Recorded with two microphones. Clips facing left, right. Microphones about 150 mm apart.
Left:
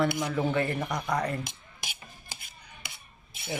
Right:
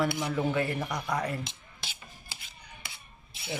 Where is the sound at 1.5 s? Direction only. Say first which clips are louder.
Left 2 dB; 15° left (ahead or behind).